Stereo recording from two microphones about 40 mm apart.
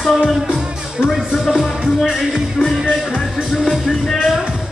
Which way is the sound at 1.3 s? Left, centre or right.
Centre.